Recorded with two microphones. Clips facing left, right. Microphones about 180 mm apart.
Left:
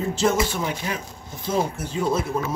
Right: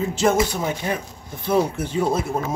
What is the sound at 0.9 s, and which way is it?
A man's voice, 60° right (ahead or behind).